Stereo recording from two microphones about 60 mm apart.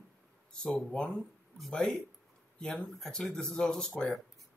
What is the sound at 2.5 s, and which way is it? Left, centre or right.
Speech, centre.